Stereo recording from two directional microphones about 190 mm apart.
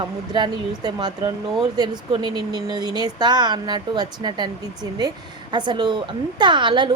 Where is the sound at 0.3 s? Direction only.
20° right (ahead or behind).